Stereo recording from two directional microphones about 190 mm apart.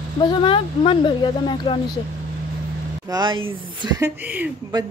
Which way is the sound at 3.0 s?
20° right (ahead or behind).